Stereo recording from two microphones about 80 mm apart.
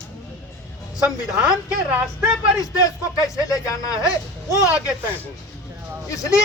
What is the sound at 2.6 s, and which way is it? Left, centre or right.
Speech, left.